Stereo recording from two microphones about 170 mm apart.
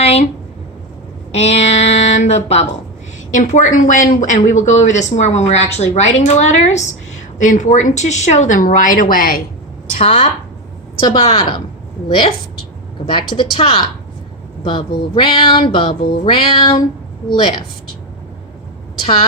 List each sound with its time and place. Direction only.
0.0 s a sound: 35° left (ahead or behind)
1.3 s speech: 40° left (ahead or behind); by 9.4 s 60° left (ahead or behind)
9.9 s speech: 40° left (ahead or behind)
11.0 s speech: 30° left (ahead or behind)
13.1 s speech: 30° left (ahead or behind)